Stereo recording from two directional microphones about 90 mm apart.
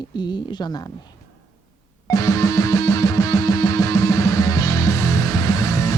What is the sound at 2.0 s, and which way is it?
Music, 40° left (ahead or behind).